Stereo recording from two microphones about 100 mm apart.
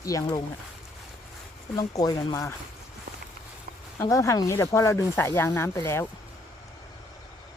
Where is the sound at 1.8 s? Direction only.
40° left (ahead or behind).